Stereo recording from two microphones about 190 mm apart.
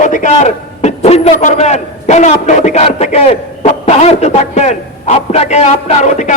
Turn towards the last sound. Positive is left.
turn(degrees=40)  # may be behind; listen again after turning